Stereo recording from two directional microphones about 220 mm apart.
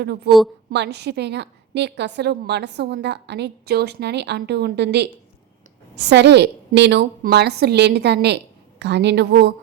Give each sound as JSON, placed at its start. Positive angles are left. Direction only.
{"t": 0.3, "sound": "a woman's voice", "side_deg": 0}
{"t": 0.7, "sound": "a woman's voice", "side_deg": -50}